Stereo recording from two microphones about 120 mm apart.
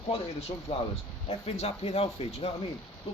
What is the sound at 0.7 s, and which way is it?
Speech, 55° left (ahead or behind).